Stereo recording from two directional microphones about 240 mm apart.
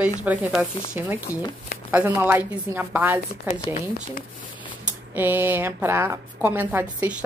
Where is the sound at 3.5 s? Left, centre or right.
Left.